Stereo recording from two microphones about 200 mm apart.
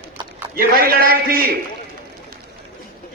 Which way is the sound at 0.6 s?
45° right (ahead or behind).